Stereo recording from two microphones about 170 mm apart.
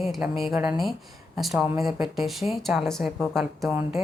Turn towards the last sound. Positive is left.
turn(degrees=0)  # may be behind; listen again after turning